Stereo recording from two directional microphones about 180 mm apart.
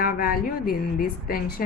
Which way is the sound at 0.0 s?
55° left (ahead or behind).